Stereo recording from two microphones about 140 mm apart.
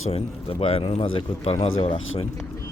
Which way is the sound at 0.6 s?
45° left (ahead or behind).